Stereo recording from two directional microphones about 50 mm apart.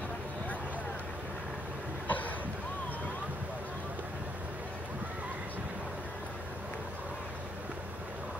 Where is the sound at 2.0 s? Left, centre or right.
Left.